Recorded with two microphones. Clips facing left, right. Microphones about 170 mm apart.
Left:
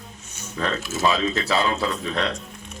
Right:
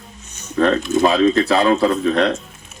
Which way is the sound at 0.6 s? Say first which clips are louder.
Right 10 dB; 45° right (ahead or behind).